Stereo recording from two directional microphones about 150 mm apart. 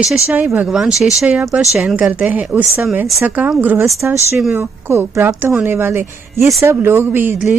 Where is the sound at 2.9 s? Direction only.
Centre (ahead or behind).